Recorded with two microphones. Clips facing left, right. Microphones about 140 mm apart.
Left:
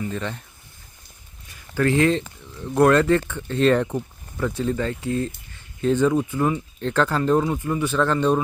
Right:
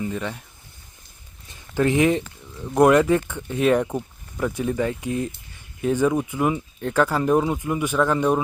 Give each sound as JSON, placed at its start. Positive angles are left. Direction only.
{"t": 0.0, "sound": "speech", "side_deg": -10}
{"t": 1.5, "sound": "a sound", "side_deg": -20}
{"t": 2.7, "sound": "speech", "side_deg": -15}